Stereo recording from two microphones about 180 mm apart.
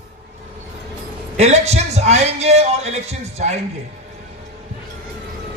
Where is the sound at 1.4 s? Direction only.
35° right (ahead or behind).